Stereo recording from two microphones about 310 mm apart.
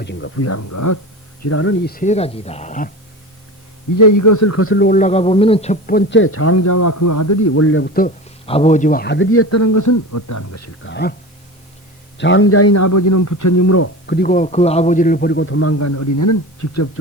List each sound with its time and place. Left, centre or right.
0.0 s a man's voice: left
1.4 s speech: left
3.9 s a man's voice: left
10.8 s a man's voice: left
12.1 s a man's voice: left
14.1 s a man's voice: left